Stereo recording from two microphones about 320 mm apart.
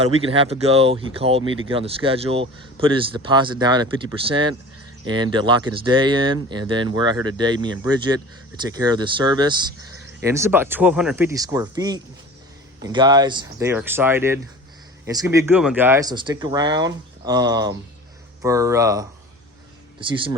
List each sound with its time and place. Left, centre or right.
0.0 s speech: centre